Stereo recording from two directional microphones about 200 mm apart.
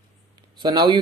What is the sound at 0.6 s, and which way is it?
Speech, 20° right (ahead or behind).